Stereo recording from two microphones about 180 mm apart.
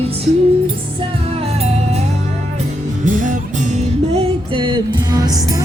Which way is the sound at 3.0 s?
45° right (ahead or behind).